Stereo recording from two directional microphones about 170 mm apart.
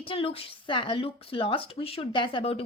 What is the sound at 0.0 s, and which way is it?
Speech, 35° left (ahead or behind).